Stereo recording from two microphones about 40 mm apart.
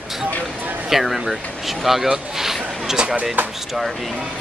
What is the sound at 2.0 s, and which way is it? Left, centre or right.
Speech, centre.